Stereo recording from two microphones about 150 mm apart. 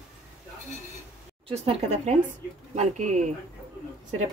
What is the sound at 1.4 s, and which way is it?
Speech, 45° right (ahead or behind).